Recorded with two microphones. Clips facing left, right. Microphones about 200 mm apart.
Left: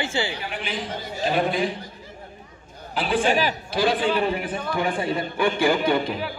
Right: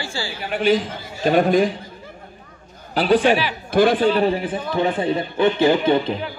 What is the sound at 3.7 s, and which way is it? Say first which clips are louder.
Speech: right 10 dB; 50° right (ahead or behind).